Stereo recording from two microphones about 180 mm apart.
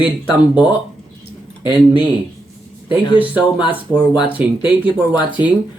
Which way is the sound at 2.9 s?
10° right (ahead or behind).